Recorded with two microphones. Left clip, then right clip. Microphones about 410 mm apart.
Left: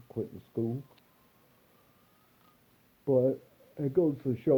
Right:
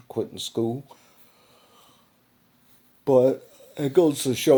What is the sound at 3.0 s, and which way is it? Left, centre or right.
Speech, right.